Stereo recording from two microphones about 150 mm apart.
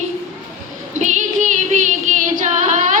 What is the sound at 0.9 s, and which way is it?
Music, 55° right (ahead or behind).